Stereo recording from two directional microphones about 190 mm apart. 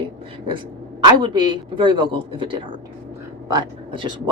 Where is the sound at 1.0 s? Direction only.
25° right (ahead or behind).